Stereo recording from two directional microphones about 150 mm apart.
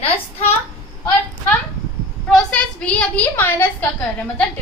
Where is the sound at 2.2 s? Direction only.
5° left (ahead or behind).